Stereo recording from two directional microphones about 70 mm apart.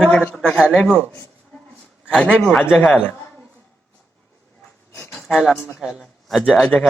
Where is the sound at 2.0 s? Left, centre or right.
Centre.